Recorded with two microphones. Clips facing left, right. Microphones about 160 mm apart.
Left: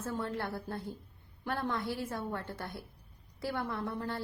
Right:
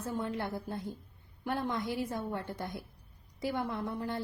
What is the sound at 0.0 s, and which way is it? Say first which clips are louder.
A woman's voice: right 1 dB; 15° right (ahead or behind).